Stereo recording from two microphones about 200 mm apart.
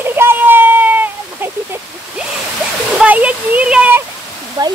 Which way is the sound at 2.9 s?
5° right (ahead or behind).